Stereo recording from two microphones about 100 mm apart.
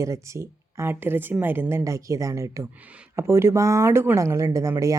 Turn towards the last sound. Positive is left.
turn(degrees=-30)  # may be behind; listen again after turning